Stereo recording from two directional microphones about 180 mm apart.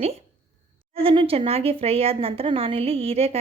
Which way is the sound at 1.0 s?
30° right (ahead or behind).